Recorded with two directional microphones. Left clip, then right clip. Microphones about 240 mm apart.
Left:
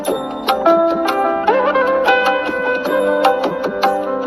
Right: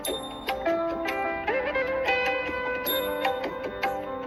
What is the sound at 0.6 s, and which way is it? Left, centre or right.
Music, left.